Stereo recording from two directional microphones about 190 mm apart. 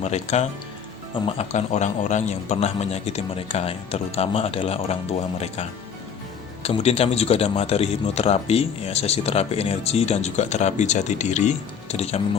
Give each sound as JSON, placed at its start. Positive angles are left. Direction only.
{"t": 0.0, "sound": "speech", "side_deg": 35}